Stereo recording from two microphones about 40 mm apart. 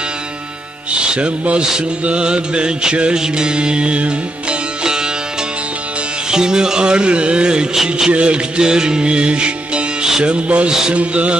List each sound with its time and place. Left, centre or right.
0.9 s music: right
6.3 s music: centre
7.7 s music: centre
8.1 s music: right